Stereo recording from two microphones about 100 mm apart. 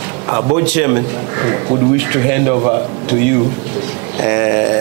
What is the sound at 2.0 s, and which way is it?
Speech, 15° right (ahead or behind).